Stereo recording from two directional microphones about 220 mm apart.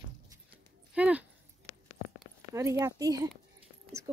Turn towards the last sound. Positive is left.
turn(degrees=-15)  # may be behind; listen again after turning